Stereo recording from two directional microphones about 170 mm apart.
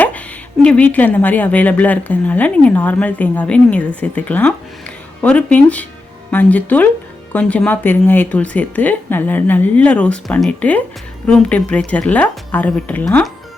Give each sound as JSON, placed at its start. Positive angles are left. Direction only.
{"t": 0.6, "sound": "a woman's voice", "side_deg": 5}